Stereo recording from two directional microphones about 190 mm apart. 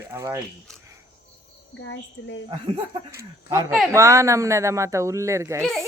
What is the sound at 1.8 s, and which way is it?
Speech, 80° left.